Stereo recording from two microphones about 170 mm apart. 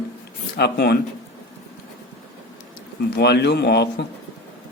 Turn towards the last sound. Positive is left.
turn(degrees=80)